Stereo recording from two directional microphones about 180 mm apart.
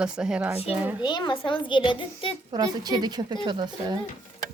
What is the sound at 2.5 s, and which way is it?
A woman's voice, 20° right (ahead or behind).